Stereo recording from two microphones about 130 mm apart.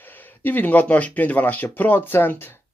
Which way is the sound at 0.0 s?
15° left (ahead or behind).